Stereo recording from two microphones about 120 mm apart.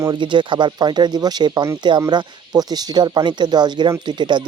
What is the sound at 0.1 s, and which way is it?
Speech, 40° right (ahead or behind).